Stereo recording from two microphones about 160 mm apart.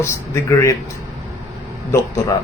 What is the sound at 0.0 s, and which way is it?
Speech, 20° left (ahead or behind).